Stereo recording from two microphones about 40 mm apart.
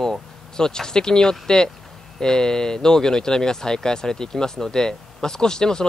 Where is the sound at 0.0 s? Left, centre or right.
Centre.